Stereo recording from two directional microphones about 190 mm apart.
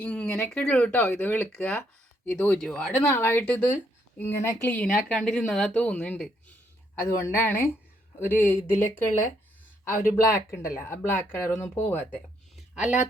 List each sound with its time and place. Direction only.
0.0 s speech: 5° left (ahead or behind)
7.0 s speech: 15° left (ahead or behind)
12.5 s a sound: 5° right (ahead or behind)